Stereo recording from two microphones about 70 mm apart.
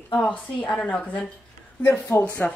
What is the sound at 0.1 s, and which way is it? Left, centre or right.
Speech, left.